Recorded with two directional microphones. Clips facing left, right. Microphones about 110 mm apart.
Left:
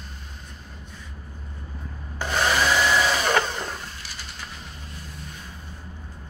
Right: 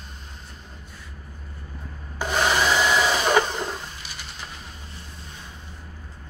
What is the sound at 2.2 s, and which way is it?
Wood, 15° right (ahead or behind).